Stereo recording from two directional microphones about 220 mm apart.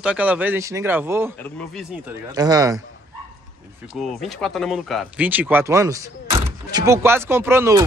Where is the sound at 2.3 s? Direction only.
15° right (ahead or behind).